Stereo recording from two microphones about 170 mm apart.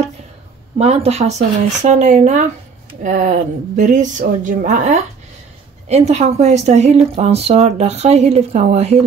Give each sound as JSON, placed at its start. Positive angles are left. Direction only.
{"t": 0.7, "sound": "a woman's voice", "side_deg": -40}